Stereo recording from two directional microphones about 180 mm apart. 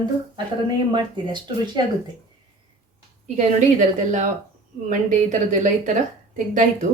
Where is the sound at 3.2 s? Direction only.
40° right (ahead or behind).